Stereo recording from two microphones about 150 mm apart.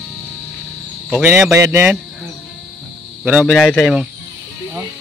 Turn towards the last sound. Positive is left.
turn(degrees=-5)  # may be behind; listen again after turning